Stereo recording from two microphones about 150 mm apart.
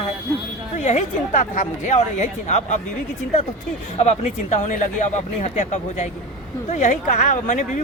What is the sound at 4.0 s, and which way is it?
Speech, 50° left (ahead or behind).